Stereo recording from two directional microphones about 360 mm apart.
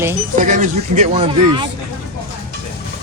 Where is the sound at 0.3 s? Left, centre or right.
Right.